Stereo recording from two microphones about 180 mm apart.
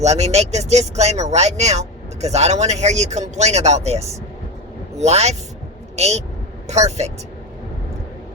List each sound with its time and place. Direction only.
0.0 s speech: 35° right (ahead or behind)